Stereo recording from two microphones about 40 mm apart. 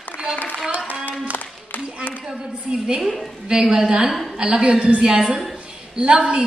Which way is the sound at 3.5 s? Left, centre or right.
Centre.